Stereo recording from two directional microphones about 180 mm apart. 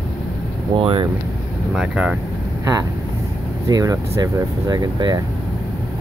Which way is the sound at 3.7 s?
20° right (ahead or behind).